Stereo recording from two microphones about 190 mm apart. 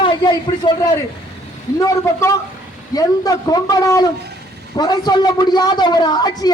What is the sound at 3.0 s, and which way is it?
A man's voice, 20° left (ahead or behind).